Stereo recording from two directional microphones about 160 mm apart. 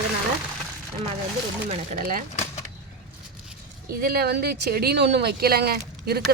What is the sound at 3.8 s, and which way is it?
Speech, 70° right (ahead or behind).